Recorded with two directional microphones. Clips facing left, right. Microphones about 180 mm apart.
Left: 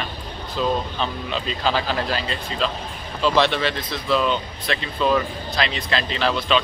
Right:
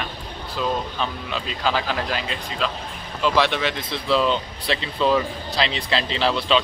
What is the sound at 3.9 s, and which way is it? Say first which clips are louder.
Speech: right 1 dB; 25° right (ahead or behind).